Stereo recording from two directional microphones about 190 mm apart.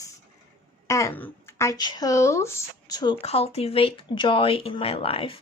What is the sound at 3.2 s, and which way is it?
Speech, 30° left (ahead or behind).